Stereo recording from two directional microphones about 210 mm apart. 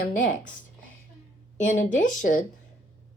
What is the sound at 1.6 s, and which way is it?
Speech, 35° left (ahead or behind).